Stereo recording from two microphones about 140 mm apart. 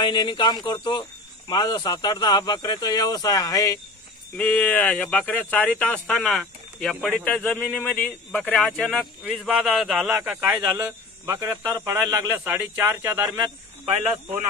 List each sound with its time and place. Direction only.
0.0 s speech: 35° left (ahead or behind)
4.4 s a man's voice: 10° left (ahead or behind); by 13.4 s 20° right (ahead or behind)